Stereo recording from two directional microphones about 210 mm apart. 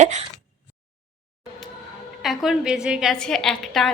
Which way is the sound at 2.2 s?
Centre (ahead or behind).